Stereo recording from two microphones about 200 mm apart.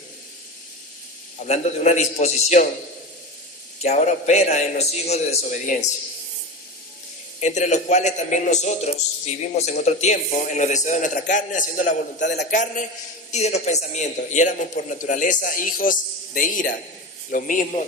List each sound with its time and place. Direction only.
1.5 s a man's voice: 35° left (ahead or behind)
3.8 s a man's voice: 35° left (ahead or behind)
7.3 s a man's voice: 35° left (ahead or behind)
12.3 s a man's voice: 55° left (ahead or behind)
13.3 s a man's voice: 35° left (ahead or behind)